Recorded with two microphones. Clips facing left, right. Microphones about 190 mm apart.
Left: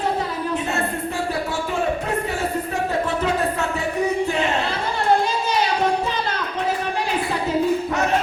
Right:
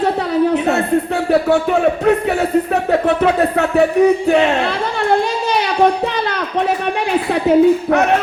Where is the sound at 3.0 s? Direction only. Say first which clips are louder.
Right 7 dB; 65° right (ahead or behind).